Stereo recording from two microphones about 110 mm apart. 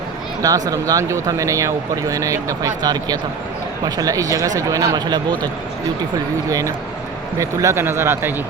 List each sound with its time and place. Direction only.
0.4 s speech: 35° right (ahead or behind)
6.5 s speech: 30° right (ahead or behind)